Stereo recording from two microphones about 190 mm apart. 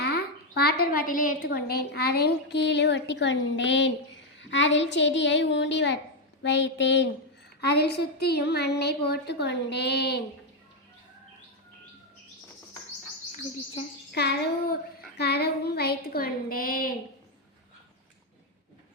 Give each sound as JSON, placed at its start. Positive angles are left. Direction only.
{"t": 0.0, "sound": "a child's voice", "side_deg": 55}
{"t": 14.1, "sound": "a child's voice", "side_deg": 60}